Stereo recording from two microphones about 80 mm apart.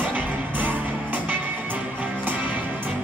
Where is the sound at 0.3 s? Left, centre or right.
Right.